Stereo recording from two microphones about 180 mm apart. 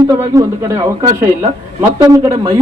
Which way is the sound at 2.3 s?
35° right (ahead or behind).